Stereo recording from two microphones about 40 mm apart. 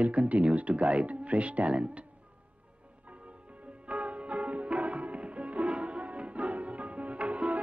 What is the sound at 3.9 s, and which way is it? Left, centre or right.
Music, right.